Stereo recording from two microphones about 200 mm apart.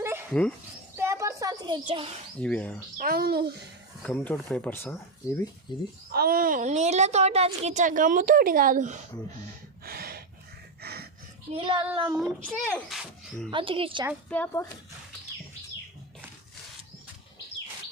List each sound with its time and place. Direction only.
0.0 s dog: 10° right (ahead or behind)
0.9 s a sound: 15° right (ahead or behind)
2.4 s speech: 5° left (ahead or behind)
3.0 s a child's voice: 50° right (ahead or behind)
4.0 s speech: 5° left (ahead or behind)
5.7 s speech: 20° left (ahead or behind)
6.1 s a woman's voice: 50° right (ahead or behind)
9.8 s a sound: 50° right (ahead or behind)
11.5 s speech: 25° right (ahead or behind)
12.1 s speech: centre (ahead or behind)
13.5 s speech: 25° right (ahead or behind)
14.3 s speech: 10° left (ahead or behind)